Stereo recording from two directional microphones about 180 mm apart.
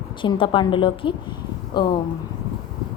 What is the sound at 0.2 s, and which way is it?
A woman's voice, 25° left (ahead or behind).